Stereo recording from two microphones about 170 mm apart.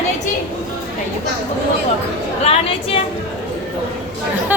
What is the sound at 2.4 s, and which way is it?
Speech, 35° left (ahead or behind).